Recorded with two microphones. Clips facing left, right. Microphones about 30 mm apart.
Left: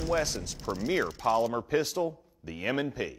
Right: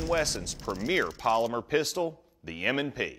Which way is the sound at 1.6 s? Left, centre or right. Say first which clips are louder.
Even; right.